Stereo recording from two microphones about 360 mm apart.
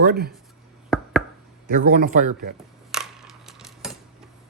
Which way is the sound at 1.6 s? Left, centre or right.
Right.